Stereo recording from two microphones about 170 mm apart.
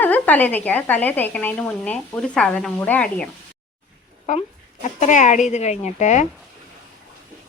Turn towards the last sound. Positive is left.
turn(degrees=45)  # may be behind; listen again after turning